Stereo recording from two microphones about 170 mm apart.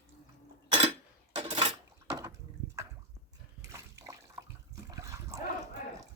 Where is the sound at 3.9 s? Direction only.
20° right (ahead or behind).